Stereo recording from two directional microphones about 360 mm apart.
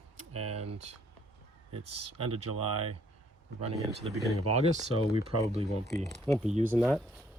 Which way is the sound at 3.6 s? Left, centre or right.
Centre.